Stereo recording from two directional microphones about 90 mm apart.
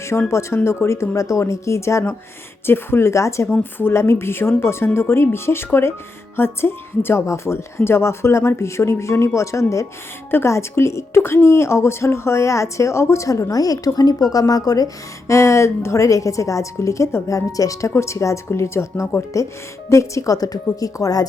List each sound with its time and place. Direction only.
0.3 s a woman's voice: 30° left (ahead or behind)
15.3 s a woman's voice: 35° left (ahead or behind)